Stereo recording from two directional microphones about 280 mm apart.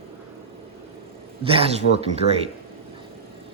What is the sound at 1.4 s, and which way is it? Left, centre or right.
Speech, centre.